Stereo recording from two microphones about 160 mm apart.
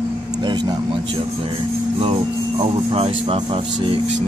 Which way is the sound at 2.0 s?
35° right (ahead or behind).